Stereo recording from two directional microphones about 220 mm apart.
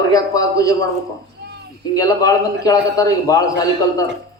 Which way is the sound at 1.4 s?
50° right (ahead or behind).